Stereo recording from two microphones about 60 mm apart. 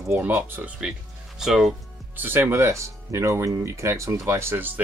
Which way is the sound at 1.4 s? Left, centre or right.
Centre.